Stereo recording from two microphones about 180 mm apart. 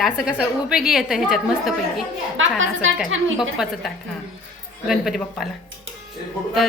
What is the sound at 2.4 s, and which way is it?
Speech, 90° right.